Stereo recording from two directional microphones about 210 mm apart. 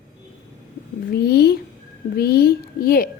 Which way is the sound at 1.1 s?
50° left (ahead or behind).